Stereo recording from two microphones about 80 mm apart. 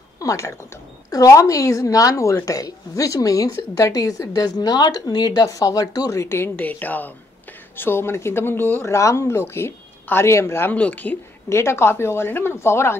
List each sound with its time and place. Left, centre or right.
0.2 s a woman's voice: left
6.2 s speech: left
10.7 s speech: centre
11.4 s speech: left